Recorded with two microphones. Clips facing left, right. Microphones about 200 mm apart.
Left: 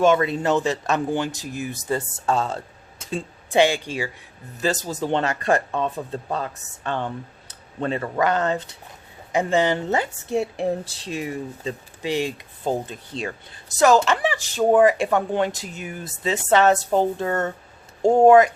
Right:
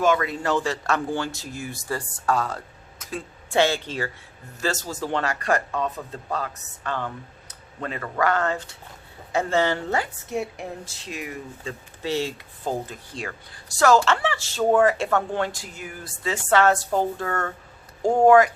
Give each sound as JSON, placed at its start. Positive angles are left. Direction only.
{"t": 0.0, "sound": "speech", "side_deg": 25}
{"t": 12.0, "sound": "speech", "side_deg": 15}